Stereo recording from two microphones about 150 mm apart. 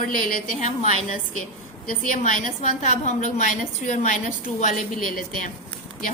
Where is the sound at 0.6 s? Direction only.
50° left (ahead or behind).